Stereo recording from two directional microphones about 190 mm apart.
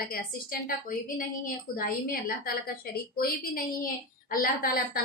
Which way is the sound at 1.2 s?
45° left (ahead or behind).